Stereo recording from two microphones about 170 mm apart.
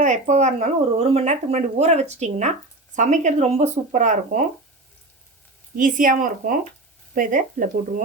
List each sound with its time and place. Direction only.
0.0 s speech: 45° right (ahead or behind)
5.7 s speech: 50° right (ahead or behind)